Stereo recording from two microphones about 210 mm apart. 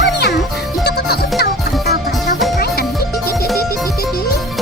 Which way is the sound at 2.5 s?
50° left (ahead or behind).